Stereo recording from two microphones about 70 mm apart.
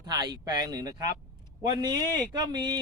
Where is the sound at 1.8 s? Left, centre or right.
Right.